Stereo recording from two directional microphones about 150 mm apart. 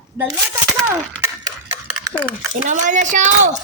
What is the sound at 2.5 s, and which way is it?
Speech, 55° right (ahead or behind).